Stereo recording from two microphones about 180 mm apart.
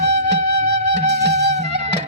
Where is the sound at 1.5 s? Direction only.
40° right (ahead or behind).